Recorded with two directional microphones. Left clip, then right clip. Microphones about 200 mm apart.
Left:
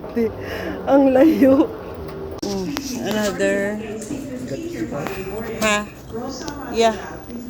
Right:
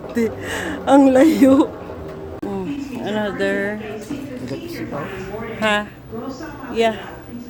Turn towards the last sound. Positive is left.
turn(degrees=-15)  # may be behind; listen again after turning